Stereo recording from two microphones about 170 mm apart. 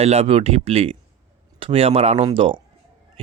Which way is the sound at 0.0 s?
35° right (ahead or behind).